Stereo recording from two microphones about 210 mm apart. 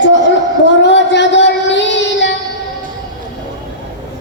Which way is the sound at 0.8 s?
55° left (ahead or behind).